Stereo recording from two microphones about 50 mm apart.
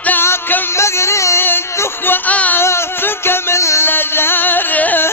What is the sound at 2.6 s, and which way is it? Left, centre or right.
Music, left.